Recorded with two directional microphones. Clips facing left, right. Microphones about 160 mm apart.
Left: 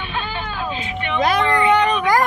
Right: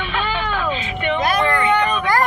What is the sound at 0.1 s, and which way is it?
Vehicle, 75° right (ahead or behind).